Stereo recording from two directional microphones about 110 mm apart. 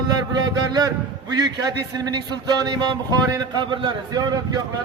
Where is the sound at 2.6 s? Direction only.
40° right (ahead or behind).